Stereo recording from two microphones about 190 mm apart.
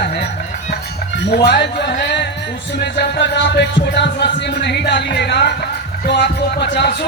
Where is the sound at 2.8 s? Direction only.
60° left (ahead or behind).